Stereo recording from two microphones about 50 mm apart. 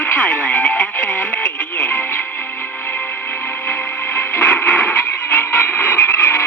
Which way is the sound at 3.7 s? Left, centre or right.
Left.